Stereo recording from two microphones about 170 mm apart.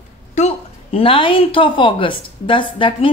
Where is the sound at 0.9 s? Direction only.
30° left (ahead or behind).